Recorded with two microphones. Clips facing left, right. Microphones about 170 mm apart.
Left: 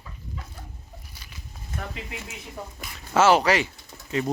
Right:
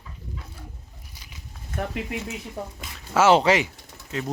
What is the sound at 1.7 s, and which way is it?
Speech, 55° right (ahead or behind).